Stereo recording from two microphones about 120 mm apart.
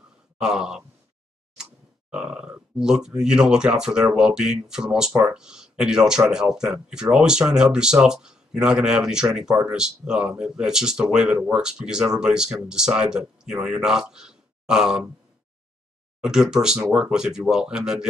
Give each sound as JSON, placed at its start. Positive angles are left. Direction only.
{"t": 0.4, "sound": "speech", "side_deg": -5}
{"t": 16.2, "sound": "speech", "side_deg": -5}